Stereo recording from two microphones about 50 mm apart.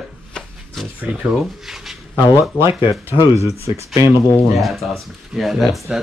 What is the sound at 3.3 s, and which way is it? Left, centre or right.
Speech, right.